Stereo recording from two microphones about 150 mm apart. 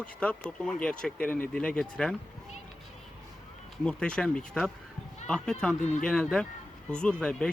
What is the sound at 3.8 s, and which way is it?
Speech, 5° left (ahead or behind).